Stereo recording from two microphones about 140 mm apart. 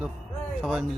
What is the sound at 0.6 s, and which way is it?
Speech, centre (ahead or behind).